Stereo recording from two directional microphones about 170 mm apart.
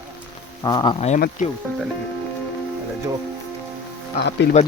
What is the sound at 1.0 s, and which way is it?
Speech, 40° left (ahead or behind).